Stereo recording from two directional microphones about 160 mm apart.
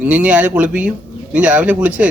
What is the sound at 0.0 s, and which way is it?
A man's voice, 10° right (ahead or behind).